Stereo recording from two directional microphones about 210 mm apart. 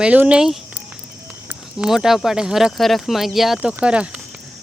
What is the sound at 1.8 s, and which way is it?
Speech, centre (ahead or behind).